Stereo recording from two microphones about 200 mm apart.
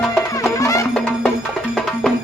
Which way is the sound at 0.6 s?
15° left (ahead or behind).